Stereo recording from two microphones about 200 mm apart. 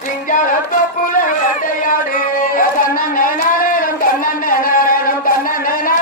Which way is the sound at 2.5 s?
45° left (ahead or behind).